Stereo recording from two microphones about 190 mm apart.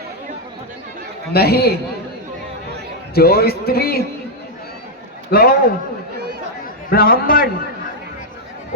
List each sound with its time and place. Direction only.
1.3 s a man's voice: 55° left (ahead or behind)
3.2 s a man's voice: 55° left (ahead or behind)
5.3 s a man's voice: 50° left (ahead or behind)
6.9 s a man's voice: 50° left (ahead or behind)